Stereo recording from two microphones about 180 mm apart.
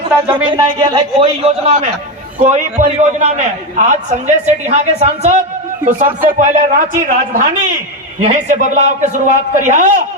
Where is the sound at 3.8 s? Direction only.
40° right (ahead or behind).